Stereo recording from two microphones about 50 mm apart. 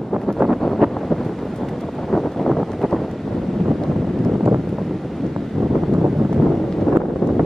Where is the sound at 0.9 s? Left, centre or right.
Centre.